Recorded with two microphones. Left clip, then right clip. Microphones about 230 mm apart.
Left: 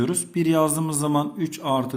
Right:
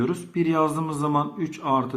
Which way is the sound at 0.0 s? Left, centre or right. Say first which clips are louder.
Left 1 dB; left.